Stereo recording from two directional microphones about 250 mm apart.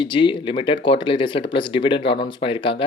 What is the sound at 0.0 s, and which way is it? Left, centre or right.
Speech, centre.